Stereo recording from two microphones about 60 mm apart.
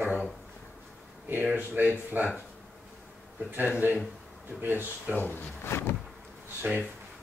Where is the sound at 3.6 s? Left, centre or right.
Right.